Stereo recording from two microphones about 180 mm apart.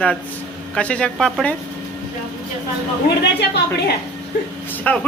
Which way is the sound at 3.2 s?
70° left (ahead or behind).